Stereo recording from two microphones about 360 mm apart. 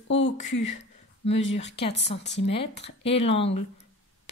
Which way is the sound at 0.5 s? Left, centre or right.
Left.